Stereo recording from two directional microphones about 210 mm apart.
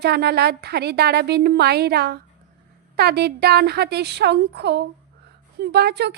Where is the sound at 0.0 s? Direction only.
50° right (ahead or behind).